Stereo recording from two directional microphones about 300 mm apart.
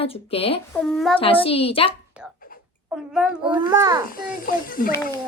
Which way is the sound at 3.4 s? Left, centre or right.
Centre.